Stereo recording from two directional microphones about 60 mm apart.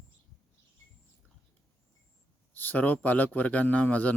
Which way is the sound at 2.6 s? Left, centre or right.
Left.